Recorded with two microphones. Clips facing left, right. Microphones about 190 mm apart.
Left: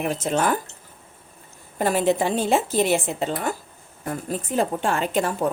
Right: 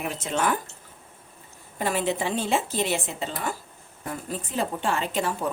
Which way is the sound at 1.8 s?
45° left (ahead or behind).